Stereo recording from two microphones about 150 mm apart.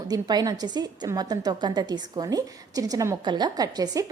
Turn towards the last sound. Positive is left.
turn(degrees=-25)  # may be behind; listen again after turning